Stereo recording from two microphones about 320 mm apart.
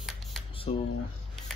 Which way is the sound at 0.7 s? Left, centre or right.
Centre.